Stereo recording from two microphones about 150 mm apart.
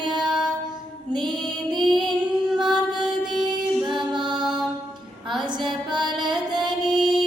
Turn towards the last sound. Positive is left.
turn(degrees=-30)  # may be behind; listen again after turning